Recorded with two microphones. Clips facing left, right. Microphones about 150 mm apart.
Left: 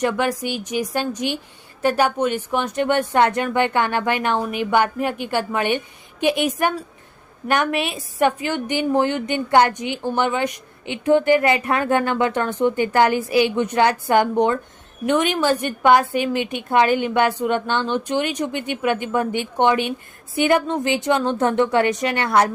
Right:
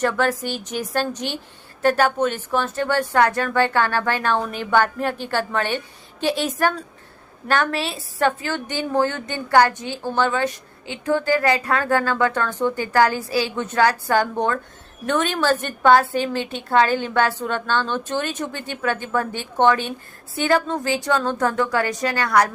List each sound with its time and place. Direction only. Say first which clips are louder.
0.0 s a woman's voice: even; 15° left (ahead or behind)